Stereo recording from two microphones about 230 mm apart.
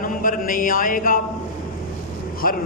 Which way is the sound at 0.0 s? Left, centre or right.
Left.